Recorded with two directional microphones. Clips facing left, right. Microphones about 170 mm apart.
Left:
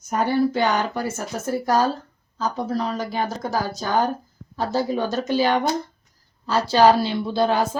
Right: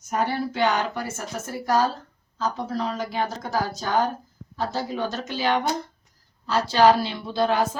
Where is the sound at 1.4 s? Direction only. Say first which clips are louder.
Left 3 dB; 35° left (ahead or behind).